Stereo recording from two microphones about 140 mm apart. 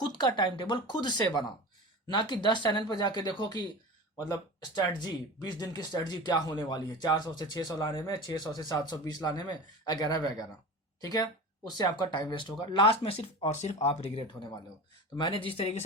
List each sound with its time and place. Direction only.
0.2 s speech: 30° left (ahead or behind); by 13.7 s 50° left (ahead or behind)
15.2 s speech: 40° left (ahead or behind)